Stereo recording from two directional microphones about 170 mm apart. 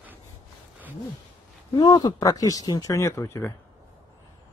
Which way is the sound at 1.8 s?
25° left (ahead or behind).